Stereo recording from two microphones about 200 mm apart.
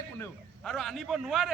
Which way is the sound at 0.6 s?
Centre (ahead or behind).